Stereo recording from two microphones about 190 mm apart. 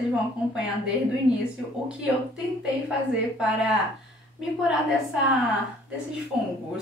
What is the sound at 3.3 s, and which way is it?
Speech, 5° right (ahead or behind).